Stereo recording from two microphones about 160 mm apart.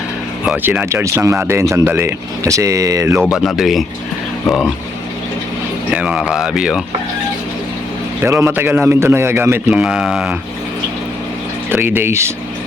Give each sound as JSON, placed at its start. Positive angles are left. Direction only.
{"t": 0.4, "sound": "speech", "side_deg": -10}
{"t": 3.4, "sound": "speech", "side_deg": 0}
{"t": 5.9, "sound": "speech", "side_deg": -5}
{"t": 8.2, "sound": "speech", "side_deg": -15}
{"t": 11.7, "sound": "speech", "side_deg": -15}